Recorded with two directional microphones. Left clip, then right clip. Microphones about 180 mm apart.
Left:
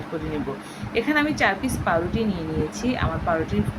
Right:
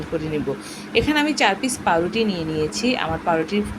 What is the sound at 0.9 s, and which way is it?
A woman's voice, 15° right (ahead or behind).